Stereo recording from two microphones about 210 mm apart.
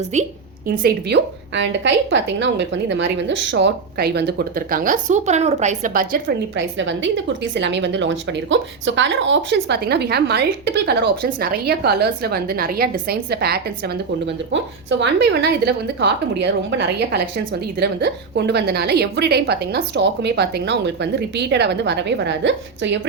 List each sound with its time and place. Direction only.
0.1 s a woman's voice: 35° right (ahead or behind)
0.8 s a woman's voice: 50° right (ahead or behind)
6.7 s a woman's voice: 60° right (ahead or behind)